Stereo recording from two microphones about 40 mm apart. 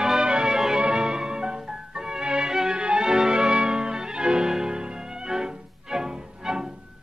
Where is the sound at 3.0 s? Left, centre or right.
Centre.